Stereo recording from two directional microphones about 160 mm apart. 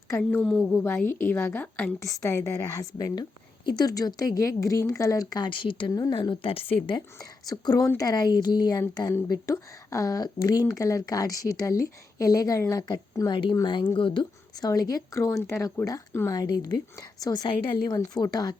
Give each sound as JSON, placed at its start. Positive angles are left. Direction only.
{"t": 0.2, "sound": "a woman's voice", "side_deg": 10}
{"t": 7.2, "sound": "speech", "side_deg": 25}